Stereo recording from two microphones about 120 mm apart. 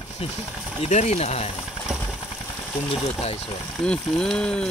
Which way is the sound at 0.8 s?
70° left (ahead or behind).